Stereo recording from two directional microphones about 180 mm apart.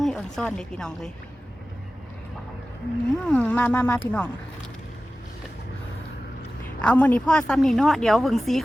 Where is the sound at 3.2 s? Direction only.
10° left (ahead or behind).